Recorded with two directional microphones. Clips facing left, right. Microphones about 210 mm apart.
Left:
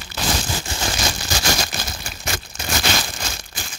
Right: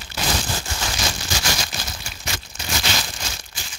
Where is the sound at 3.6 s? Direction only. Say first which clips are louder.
Left 5 dB; 55° left (ahead or behind).